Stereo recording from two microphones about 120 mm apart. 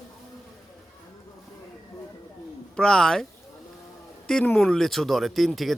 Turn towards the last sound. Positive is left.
turn(degrees=0)  # may be behind; listen again after turning